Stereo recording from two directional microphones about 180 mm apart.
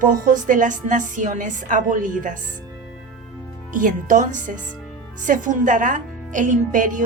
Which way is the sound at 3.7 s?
50° right (ahead or behind).